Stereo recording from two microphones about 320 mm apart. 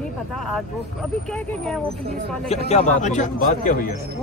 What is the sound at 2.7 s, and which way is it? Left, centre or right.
A man's voice, left.